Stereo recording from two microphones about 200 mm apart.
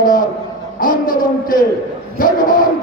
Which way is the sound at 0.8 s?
45° left (ahead or behind).